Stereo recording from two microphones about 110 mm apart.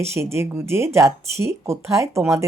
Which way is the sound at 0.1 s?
25° right (ahead or behind).